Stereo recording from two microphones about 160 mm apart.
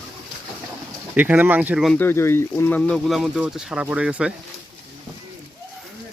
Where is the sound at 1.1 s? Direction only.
10° right (ahead or behind).